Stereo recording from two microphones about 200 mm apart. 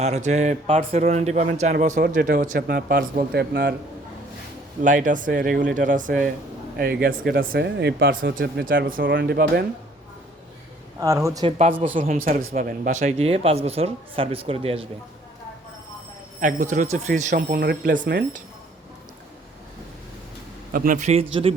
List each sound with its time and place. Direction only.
0.0 s speech: 35° right (ahead or behind); by 3.8 s 55° right (ahead or behind)
4.8 s speech: 40° right (ahead or behind)
11.0 s speech: 15° right (ahead or behind)
11.4 s speech: 35° right (ahead or behind)
16.4 s speech: 40° right (ahead or behind)
17.5 s speech: 50° right (ahead or behind)
18.0 s speech: 60° right (ahead or behind)
20.7 s speech: 40° right (ahead or behind)